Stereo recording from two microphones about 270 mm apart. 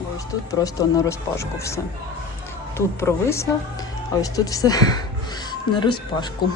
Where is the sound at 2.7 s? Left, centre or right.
Centre.